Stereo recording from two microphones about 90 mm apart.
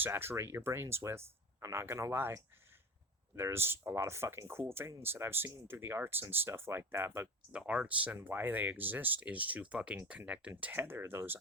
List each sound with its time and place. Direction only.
0.0 s speech: 25° right (ahead or behind)
3.3 s speech: 25° right (ahead or behind)
7.5 s speech: 15° right (ahead or behind)
10.5 s speech: 25° right (ahead or behind)